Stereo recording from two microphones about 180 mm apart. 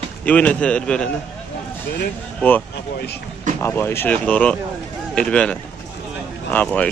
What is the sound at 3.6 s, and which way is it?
Speech, 15° left (ahead or behind).